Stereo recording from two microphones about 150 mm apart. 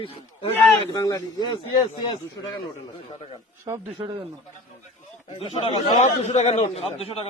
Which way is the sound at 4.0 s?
30° right (ahead or behind).